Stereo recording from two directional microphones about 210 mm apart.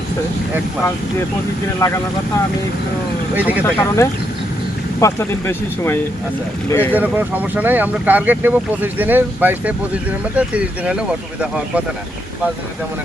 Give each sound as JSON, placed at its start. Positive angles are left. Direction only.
{"t": 1.8, "sound": "speech", "side_deg": 15}
{"t": 3.3, "sound": "speech", "side_deg": -5}
{"t": 3.6, "sound": "speech", "side_deg": 10}
{"t": 6.9, "sound": "speech", "side_deg": -10}